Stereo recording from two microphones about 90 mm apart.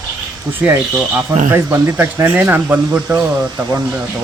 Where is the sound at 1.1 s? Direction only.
25° right (ahead or behind).